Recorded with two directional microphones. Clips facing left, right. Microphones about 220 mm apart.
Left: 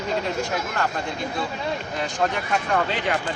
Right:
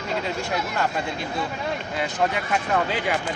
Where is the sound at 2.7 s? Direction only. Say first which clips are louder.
Even; 5° right (ahead or behind).